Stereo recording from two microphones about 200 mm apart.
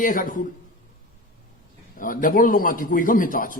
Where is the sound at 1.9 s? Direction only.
45° left (ahead or behind).